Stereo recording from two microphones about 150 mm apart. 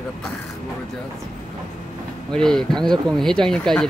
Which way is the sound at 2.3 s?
5° left (ahead or behind).